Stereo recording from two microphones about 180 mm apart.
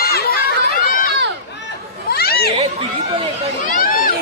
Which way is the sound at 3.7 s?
50° left (ahead or behind).